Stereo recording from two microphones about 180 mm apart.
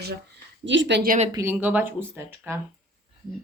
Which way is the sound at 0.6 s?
90° right.